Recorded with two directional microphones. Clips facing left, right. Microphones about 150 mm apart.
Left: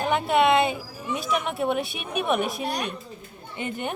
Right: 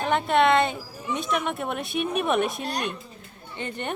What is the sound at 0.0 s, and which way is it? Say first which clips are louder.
Speech: even; 5° left (ahead or behind).